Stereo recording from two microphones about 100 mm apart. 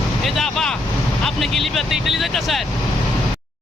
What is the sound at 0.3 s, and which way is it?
Speech, 5° left (ahead or behind).